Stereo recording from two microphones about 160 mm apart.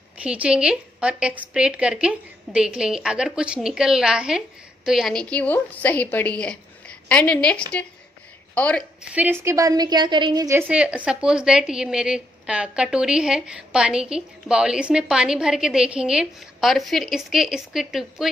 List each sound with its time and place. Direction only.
0.2 s a woman's voice: 5° right (ahead or behind); by 8.8 s 10° left (ahead or behind)
9.0 s a woman's voice: 10° right (ahead or behind)
10.7 s a woman's voice: 5° right (ahead or behind)